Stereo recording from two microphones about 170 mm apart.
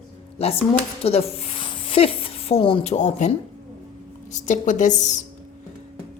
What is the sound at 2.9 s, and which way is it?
Speech, 40° left (ahead or behind).